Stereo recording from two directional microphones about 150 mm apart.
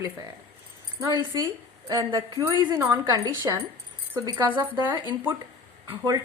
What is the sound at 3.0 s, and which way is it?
A woman's voice, 25° right (ahead or behind).